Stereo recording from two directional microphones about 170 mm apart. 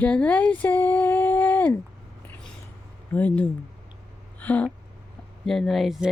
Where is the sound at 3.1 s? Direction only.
10° left (ahead or behind).